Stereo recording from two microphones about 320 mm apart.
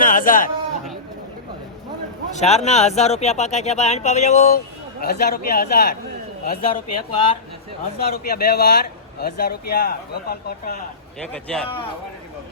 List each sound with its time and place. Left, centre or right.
0.0 s speech: left
2.3 s speech: left
7.1 s speech: centre
7.9 s speech: left
11.4 s a man's voice: centre